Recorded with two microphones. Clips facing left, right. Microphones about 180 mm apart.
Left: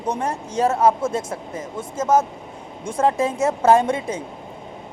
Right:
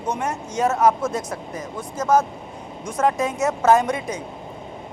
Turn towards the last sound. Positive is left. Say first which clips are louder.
# left 1 dB
turn(degrees=30)  # may be behind; listen again after turning